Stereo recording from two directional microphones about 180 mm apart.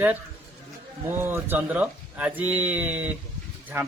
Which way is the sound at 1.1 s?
10° right (ahead or behind).